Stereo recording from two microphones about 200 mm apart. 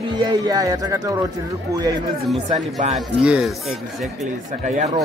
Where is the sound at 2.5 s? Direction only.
35° right (ahead or behind).